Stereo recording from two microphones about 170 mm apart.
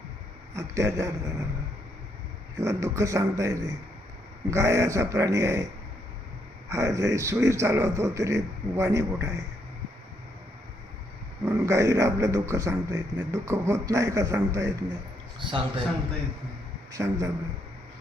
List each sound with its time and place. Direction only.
0.5 s a man's voice: 15° right (ahead or behind)
2.6 s a man's voice: 15° right (ahead or behind)
6.7 s a man's voice: 15° right (ahead or behind)
11.4 s a man's voice: 15° right (ahead or behind)
15.4 s a man's voice: 30° right (ahead or behind)
16.9 s a man's voice: 20° right (ahead or behind)